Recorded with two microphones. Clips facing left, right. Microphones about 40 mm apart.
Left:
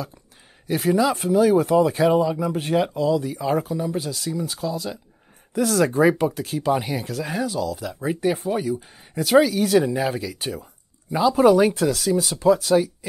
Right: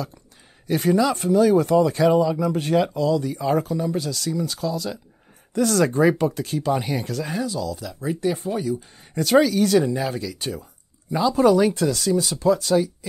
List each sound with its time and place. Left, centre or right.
0.7 s speech: centre